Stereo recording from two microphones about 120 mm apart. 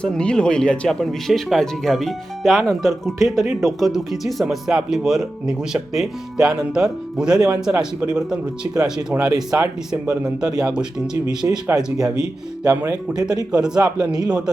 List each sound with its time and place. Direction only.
0.0 s speech: 10° left (ahead or behind)
12.6 s speech: 30° right (ahead or behind)
13.5 s speech: 5° right (ahead or behind)